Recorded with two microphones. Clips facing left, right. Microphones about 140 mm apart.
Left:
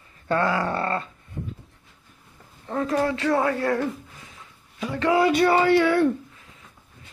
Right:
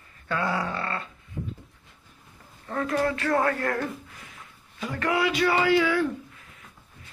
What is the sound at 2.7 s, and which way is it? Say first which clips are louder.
Speech: left 2 dB; 20° left (ahead or behind).